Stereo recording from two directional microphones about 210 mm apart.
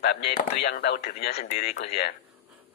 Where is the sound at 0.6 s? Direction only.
50° left (ahead or behind).